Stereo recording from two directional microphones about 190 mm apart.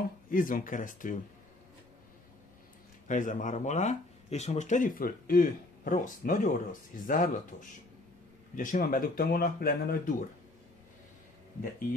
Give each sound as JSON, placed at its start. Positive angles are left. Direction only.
{"t": 0.3, "sound": "speech", "side_deg": 45}
{"t": 3.1, "sound": "speech", "side_deg": 40}
{"t": 8.5, "sound": "speech", "side_deg": 45}